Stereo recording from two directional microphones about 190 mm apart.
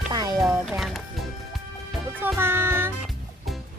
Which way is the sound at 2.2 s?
10° right (ahead or behind).